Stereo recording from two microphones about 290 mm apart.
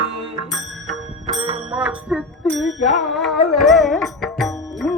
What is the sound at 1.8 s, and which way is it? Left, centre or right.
Music, centre.